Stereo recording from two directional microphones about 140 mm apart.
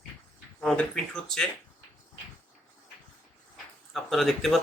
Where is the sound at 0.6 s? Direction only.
5° left (ahead or behind).